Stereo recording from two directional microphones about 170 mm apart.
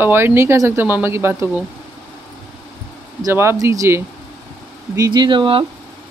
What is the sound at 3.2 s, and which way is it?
Speech, 15° right (ahead or behind).